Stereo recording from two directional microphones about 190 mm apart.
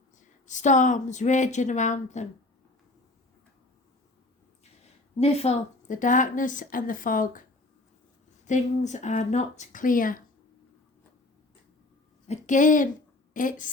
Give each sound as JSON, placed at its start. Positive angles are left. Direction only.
{"t": 0.2, "sound": "speech", "side_deg": 40}
{"t": 5.2, "sound": "a woman's voice", "side_deg": 35}
{"t": 8.4, "sound": "speech", "side_deg": 40}
{"t": 12.3, "sound": "a woman's voice", "side_deg": 40}